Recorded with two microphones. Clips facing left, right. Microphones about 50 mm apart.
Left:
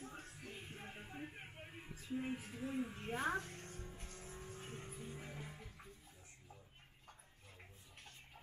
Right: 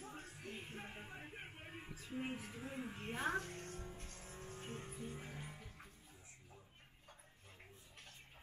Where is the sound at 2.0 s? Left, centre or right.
Centre.